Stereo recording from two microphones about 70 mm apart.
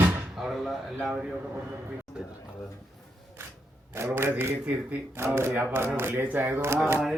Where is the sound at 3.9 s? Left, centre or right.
Right.